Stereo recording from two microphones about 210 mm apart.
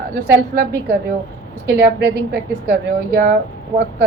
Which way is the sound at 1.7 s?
50° right (ahead or behind).